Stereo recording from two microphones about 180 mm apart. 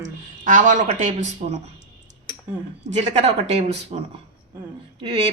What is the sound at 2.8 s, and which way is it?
Speech, 40° right (ahead or behind).